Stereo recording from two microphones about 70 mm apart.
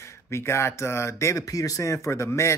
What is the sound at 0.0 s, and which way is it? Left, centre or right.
Speech, left.